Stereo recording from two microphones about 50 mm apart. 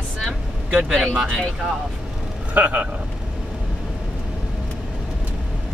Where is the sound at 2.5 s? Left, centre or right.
Right.